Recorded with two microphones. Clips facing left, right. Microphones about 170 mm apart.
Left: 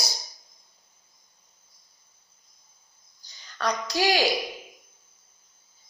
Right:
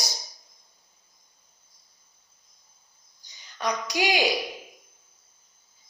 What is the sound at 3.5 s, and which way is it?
Speech, 15° right (ahead or behind).